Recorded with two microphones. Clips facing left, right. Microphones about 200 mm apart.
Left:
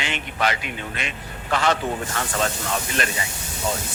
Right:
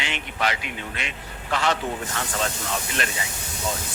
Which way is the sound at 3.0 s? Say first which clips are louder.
Left 3 dB; 50° left (ahead or behind).